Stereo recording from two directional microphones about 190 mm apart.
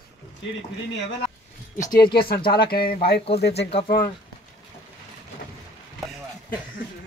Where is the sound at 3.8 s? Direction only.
50° left (ahead or behind).